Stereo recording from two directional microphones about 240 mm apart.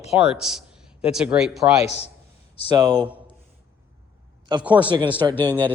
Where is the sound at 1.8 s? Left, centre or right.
Left.